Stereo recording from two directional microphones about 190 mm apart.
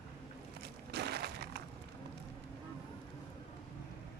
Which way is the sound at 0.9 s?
60° right (ahead or behind).